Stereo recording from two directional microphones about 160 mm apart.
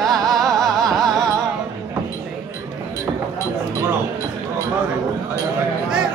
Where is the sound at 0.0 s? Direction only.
Centre (ahead or behind).